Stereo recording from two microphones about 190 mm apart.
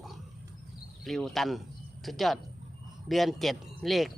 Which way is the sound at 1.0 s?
Centre (ahead or behind).